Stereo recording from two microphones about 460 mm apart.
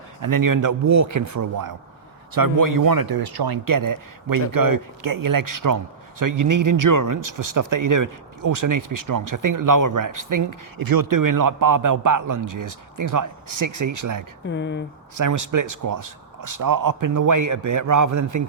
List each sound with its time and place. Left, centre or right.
0.2 s speech: right
14.4 s speech: left
15.2 s speech: right